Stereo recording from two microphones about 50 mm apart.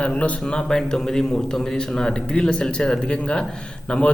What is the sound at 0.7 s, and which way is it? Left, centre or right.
A man's voice, centre.